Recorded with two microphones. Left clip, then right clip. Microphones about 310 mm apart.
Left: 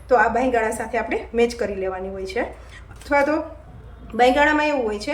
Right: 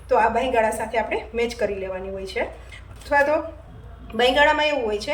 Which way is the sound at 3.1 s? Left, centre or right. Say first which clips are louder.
Even; centre.